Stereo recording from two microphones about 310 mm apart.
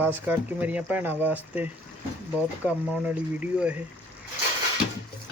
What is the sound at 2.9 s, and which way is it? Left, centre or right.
Speech, centre.